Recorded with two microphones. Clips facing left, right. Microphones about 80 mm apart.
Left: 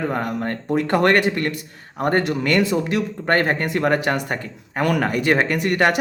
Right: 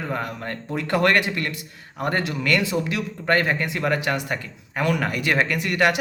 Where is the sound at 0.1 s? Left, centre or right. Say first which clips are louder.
Left 5 dB; left.